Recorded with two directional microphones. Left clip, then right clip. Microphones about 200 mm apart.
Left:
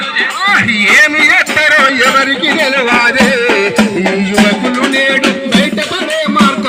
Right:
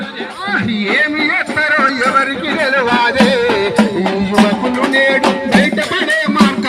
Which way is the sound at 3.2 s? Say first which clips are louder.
Left 3 dB; 50° left (ahead or behind).